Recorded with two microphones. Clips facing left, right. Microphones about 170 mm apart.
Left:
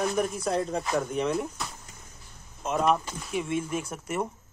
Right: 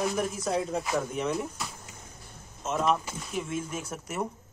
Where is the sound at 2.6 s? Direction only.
Centre (ahead or behind).